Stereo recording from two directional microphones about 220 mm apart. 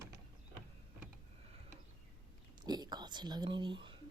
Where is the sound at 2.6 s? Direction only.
20° right (ahead or behind).